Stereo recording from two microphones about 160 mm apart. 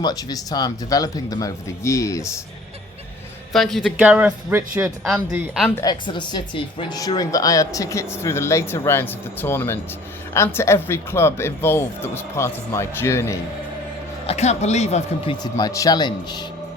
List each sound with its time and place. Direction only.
0.0 s speech: 25° left (ahead or behind)
3.5 s a man's voice: centre (ahead or behind); by 4.9 s 15° right (ahead or behind)
5.8 s speech: 30° left (ahead or behind)
14.3 s speech: 45° left (ahead or behind)
15.5 s speech: 20° left (ahead or behind)